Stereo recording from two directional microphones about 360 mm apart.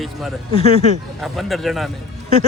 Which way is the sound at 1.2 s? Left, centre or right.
Centre.